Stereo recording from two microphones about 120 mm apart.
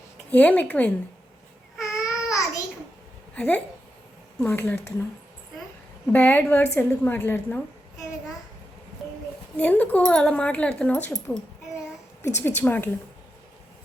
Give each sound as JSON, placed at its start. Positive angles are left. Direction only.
{"t": 0.3, "sound": "speech", "side_deg": 10}
{"t": 1.8, "sound": "babbling", "side_deg": 25}
{"t": 3.3, "sound": "speech", "side_deg": 10}
{"t": 6.1, "sound": "speech", "side_deg": 15}
{"t": 9.6, "sound": "speech", "side_deg": 15}
{"t": 12.4, "sound": "speech", "side_deg": 15}